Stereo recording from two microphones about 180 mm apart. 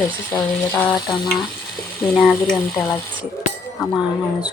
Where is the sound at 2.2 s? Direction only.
5° left (ahead or behind).